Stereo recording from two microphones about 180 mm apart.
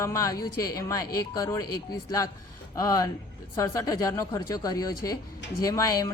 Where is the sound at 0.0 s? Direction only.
15° left (ahead or behind).